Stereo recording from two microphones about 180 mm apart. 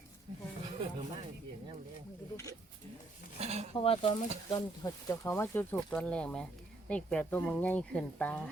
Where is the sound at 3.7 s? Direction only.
30° left (ahead or behind).